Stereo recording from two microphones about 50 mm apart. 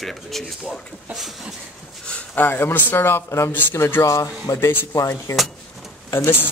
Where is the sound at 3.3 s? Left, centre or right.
Left.